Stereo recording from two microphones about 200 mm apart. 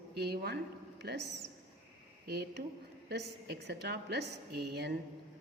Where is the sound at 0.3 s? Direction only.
55° right (ahead or behind).